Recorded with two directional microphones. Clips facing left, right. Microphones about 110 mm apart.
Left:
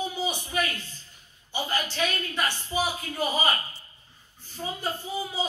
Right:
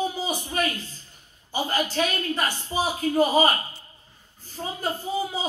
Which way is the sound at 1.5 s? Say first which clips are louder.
Right 4 dB; 40° right (ahead or behind).